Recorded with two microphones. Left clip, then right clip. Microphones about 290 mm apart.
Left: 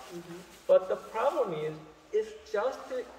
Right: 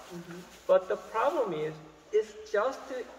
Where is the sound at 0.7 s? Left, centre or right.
Centre.